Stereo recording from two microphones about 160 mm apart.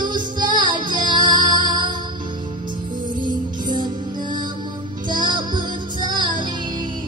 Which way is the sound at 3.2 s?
30° right (ahead or behind).